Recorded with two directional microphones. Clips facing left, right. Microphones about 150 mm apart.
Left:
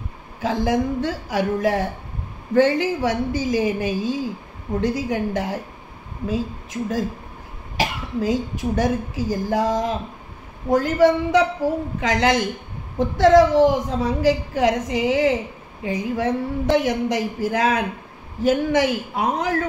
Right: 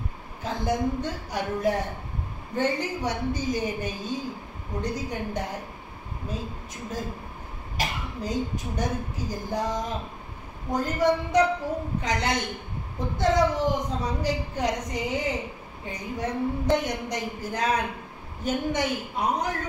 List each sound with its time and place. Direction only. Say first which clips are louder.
0.4 s a woman's voice: left 6 dB; 90° left